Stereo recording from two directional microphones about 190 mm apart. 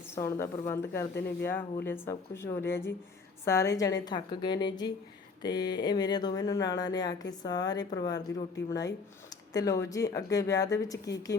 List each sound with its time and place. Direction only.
0.2 s a woman's voice: 15° left (ahead or behind)
5.4 s a sound: 20° left (ahead or behind)
5.7 s a woman's voice: 20° left (ahead or behind)